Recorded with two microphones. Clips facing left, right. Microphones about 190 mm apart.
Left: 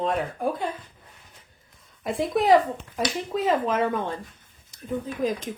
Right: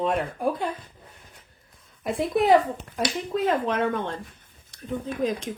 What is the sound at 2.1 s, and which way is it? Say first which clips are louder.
Speech: even; centre (ahead or behind).